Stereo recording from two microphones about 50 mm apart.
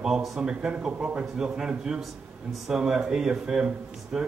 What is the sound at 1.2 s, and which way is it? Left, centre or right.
A man's voice, centre.